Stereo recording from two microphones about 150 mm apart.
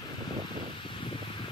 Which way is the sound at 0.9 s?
35° left (ahead or behind).